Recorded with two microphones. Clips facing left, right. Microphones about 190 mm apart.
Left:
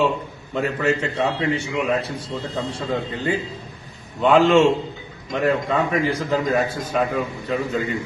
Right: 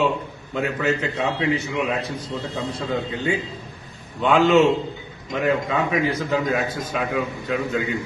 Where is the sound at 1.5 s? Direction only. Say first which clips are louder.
Left 1 dB; 30° left (ahead or behind).